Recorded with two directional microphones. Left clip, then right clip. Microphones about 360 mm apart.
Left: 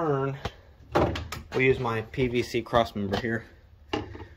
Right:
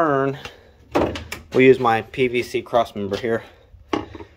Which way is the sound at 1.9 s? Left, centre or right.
Centre.